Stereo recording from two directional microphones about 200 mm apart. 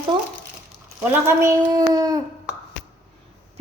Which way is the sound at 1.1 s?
15° right (ahead or behind).